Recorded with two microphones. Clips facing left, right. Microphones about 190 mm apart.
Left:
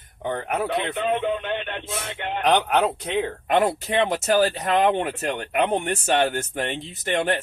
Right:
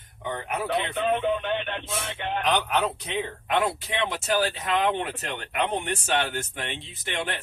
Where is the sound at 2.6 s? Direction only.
55° left (ahead or behind).